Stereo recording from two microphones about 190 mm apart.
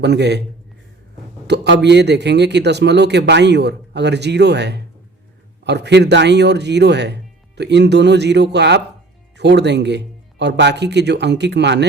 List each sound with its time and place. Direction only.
0.0 s a man's voice: 65° right (ahead or behind)
1.5 s a man's voice: 65° right (ahead or behind)